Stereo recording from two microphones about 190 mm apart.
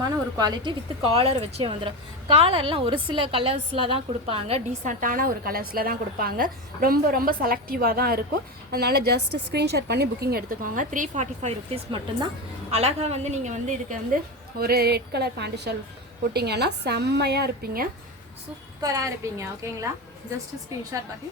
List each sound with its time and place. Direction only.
0.0 s speech: 20° right (ahead or behind)
4.9 s a woman's voice: 45° right (ahead or behind)
14.6 s a woman's voice: 55° right (ahead or behind)
18.8 s a woman's voice: 20° right (ahead or behind)